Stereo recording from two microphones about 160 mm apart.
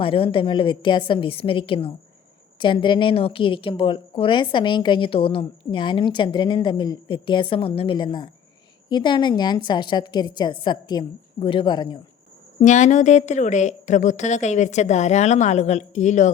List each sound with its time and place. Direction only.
0.0 s a woman's voice: 35° left (ahead or behind)
12.5 s a woman's voice: 50° left (ahead or behind)